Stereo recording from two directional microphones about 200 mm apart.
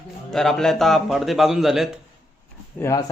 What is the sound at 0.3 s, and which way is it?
Speech, centre (ahead or behind).